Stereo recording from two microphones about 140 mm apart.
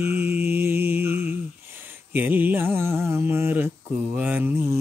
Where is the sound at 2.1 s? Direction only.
15° right (ahead or behind).